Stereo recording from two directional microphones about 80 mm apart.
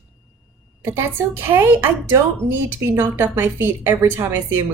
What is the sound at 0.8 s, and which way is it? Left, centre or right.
Speech, right.